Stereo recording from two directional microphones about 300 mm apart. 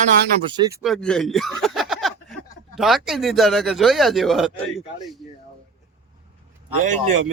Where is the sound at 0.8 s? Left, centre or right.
Centre.